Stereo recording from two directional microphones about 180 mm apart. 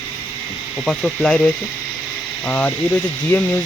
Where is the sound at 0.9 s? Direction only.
5° left (ahead or behind).